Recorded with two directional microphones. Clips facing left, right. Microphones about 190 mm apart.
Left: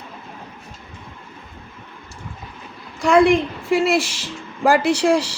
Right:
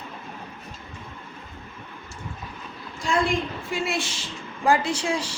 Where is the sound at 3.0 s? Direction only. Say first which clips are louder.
Left 10 dB; 70° left (ahead or behind).